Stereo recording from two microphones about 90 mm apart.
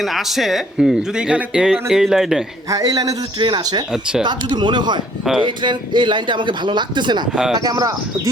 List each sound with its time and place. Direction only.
0.0 s speech: centre (ahead or behind)
2.6 s a man's voice: 40° right (ahead or behind)
3.4 s speech: 55° right (ahead or behind)
7.6 s speech: 45° right (ahead or behind)